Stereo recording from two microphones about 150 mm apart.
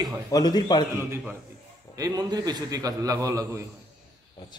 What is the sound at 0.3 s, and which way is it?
Speech, 25° left (ahead or behind).